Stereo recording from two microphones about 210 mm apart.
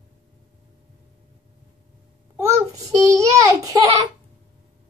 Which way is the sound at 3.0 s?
15° right (ahead or behind).